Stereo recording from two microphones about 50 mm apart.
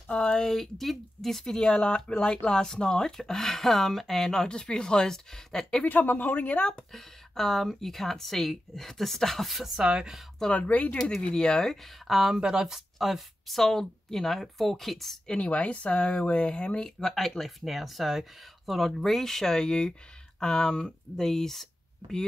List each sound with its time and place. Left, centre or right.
0.1 s speech: centre
0.5 s speech: centre
1.4 s speech: centre
5.9 s speech: left
6.9 s speech: centre
9.8 s speech: centre
10.4 s speech: left
11.0 s speech: centre
12.1 s speech: centre
15.2 s speech: left
17.0 s speech: centre